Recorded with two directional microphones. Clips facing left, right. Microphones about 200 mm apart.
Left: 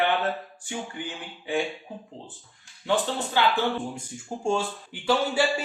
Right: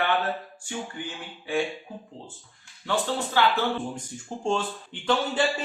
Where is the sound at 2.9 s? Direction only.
20° left (ahead or behind).